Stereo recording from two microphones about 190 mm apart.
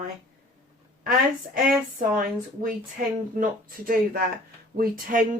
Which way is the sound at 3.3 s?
50° right (ahead or behind).